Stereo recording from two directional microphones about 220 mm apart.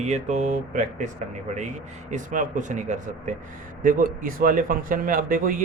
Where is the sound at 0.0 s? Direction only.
30° right (ahead or behind).